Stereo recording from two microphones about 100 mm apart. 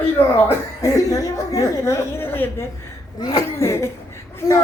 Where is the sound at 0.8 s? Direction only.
35° left (ahead or behind).